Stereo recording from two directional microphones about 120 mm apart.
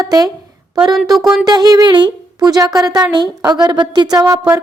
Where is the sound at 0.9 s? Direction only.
Centre (ahead or behind).